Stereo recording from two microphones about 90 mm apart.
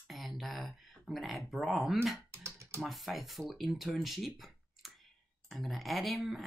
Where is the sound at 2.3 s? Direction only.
30° right (ahead or behind).